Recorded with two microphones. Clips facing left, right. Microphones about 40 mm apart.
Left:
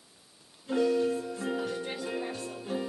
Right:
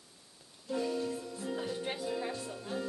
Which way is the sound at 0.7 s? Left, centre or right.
Left.